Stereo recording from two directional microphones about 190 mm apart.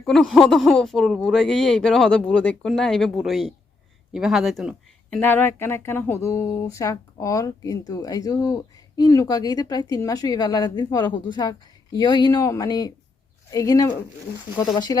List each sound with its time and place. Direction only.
0.0 s speech: centre (ahead or behind)
5.2 s speech: 10° left (ahead or behind)